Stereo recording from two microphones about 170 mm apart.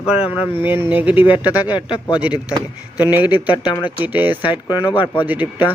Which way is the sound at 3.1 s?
10° right (ahead or behind).